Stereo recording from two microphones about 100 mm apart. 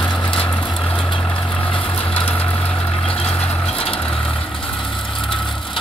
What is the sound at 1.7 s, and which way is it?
Vehicle, 65° left (ahead or behind).